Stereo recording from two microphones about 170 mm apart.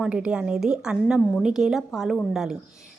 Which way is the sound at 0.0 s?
5° right (ahead or behind).